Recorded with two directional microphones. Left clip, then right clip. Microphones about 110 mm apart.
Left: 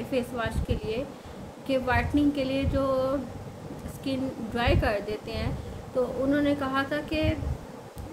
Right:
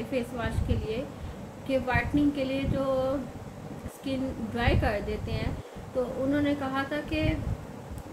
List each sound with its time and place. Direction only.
0.1 s a woman's voice: 25° left (ahead or behind)